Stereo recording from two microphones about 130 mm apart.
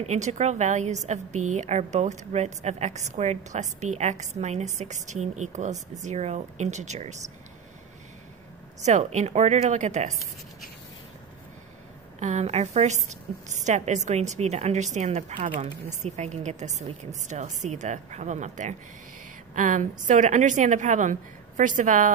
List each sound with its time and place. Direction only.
0.0 s a woman's voice: 60° right (ahead or behind)
8.8 s a woman's voice: 65° right (ahead or behind)
12.2 s a woman's voice: 60° right (ahead or behind)
19.5 s a woman's voice: 75° right (ahead or behind)